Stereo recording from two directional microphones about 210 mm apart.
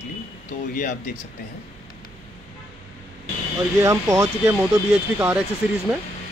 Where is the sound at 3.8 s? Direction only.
15° right (ahead or behind).